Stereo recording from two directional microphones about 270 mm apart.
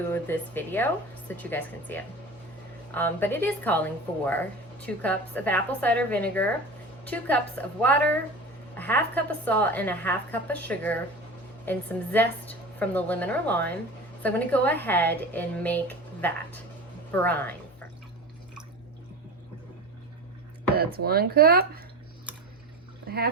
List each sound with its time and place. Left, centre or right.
0.1 s a woman's voice: centre
20.7 s speech: right
23.0 s speech: right